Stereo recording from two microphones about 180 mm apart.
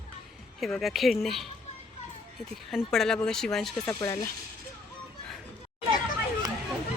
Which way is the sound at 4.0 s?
15° left (ahead or behind).